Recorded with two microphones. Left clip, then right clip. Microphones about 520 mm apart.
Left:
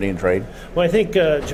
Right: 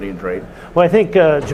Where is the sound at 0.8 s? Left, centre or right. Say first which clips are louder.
Right 5 dB; right.